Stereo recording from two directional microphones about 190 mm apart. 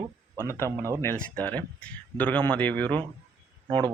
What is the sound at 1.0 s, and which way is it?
Speech, 10° left (ahead or behind).